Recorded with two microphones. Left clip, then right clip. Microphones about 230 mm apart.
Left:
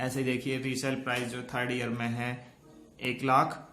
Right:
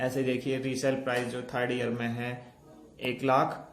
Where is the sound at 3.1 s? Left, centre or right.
Left.